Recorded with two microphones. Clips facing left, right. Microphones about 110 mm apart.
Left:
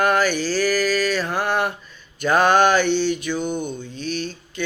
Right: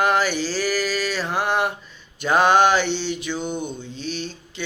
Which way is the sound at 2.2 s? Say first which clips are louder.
Even; 20° right (ahead or behind).